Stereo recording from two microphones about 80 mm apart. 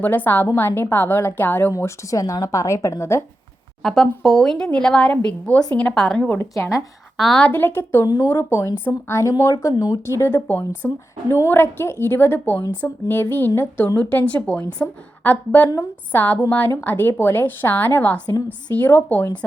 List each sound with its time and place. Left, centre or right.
0.0 s a woman's voice: left
1.7 s speech: left
4.0 s a woman's voice: centre; by 6.4 s left
6.4 s speech: left
7.2 s a woman's voice: centre
7.4 s a woman's voice: left
8.0 s speech: left
8.3 s a woman's voice: left